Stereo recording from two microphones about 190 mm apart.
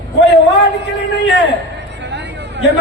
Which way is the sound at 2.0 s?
65° right (ahead or behind).